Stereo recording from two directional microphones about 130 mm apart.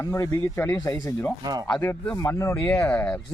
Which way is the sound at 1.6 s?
10° left (ahead or behind).